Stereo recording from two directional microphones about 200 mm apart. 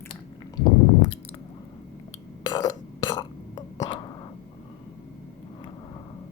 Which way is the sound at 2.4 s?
20° left (ahead or behind).